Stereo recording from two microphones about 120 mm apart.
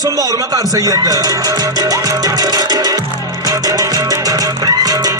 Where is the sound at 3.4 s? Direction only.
30° right (ahead or behind).